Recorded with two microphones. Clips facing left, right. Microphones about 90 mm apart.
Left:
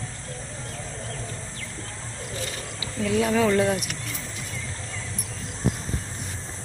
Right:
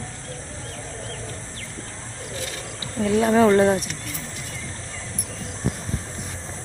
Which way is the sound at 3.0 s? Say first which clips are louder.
Right 5 dB; 35° right (ahead or behind).